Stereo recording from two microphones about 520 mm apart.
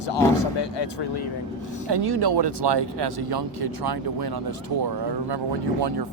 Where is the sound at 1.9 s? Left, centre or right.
Right.